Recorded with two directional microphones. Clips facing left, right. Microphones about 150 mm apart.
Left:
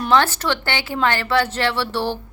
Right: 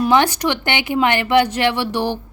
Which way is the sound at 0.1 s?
15° right (ahead or behind).